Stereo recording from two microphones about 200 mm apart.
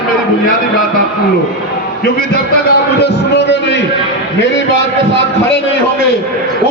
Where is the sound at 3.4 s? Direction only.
60° left (ahead or behind).